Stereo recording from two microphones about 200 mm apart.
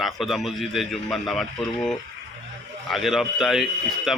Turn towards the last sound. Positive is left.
turn(degrees=0)  # may be behind; listen again after turning